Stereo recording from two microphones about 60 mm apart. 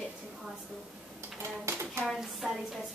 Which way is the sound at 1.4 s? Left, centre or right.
Right.